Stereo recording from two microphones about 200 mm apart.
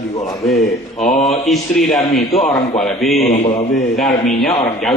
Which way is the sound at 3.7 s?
Centre (ahead or behind).